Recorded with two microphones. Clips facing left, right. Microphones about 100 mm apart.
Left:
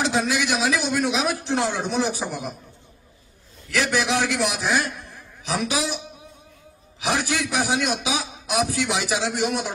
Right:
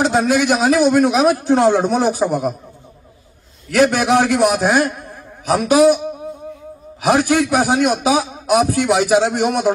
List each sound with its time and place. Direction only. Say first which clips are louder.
0.0 s a man's voice: right 8 dB; 45° right (ahead or behind)
3.7 s a man's voice: right 9 dB; 50° right (ahead or behind)